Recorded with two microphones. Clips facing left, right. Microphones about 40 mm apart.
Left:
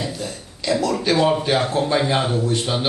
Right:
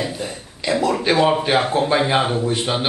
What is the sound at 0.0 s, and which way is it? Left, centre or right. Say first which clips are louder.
A man's voice: right 2 dB; right.